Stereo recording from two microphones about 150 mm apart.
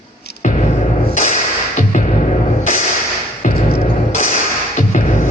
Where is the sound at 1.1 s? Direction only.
50° left (ahead or behind).